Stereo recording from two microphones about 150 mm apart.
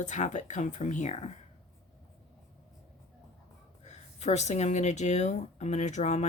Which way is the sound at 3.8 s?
50° left (ahead or behind).